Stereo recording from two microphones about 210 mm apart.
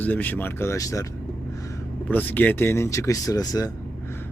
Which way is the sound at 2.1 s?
10° left (ahead or behind).